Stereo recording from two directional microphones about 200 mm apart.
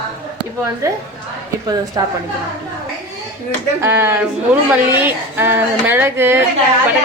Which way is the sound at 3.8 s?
10° right (ahead or behind).